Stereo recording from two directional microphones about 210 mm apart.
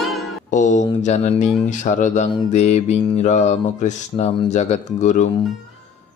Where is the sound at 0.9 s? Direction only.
30° left (ahead or behind).